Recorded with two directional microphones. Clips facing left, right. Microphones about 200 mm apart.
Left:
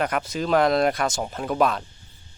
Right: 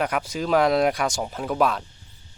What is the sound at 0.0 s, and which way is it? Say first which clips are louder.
Speech: even; 10° right (ahead or behind).